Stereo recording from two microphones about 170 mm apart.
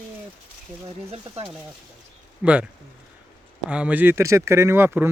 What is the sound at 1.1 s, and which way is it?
Speech, 35° right (ahead or behind).